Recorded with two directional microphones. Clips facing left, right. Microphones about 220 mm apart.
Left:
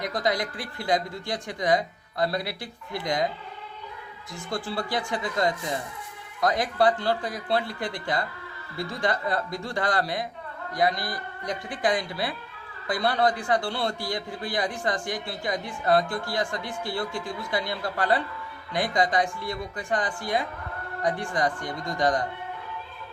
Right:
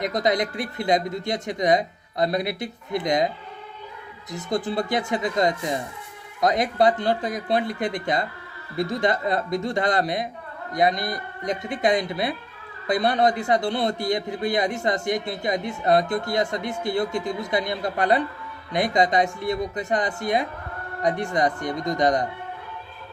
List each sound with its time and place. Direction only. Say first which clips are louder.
0.0 s a man's voice: right 4 dB; 20° right (ahead or behind)